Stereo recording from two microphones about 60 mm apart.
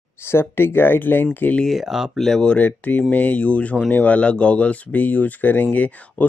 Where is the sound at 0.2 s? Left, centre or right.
Left.